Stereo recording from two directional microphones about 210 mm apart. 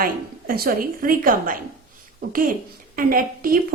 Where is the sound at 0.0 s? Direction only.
45° right (ahead or behind).